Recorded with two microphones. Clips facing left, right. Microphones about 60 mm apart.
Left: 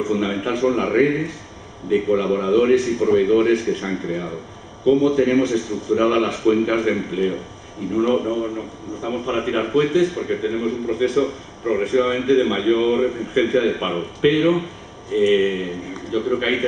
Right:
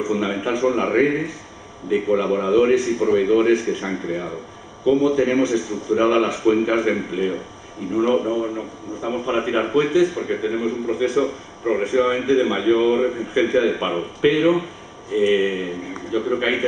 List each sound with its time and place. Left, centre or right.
0.0 s a man's voice: centre